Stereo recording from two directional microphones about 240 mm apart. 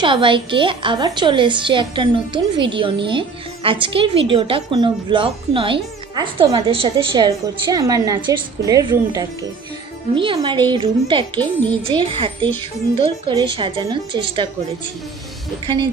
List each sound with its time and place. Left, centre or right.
0.0 s a woman's voice: right
15.6 s a woman's voice: centre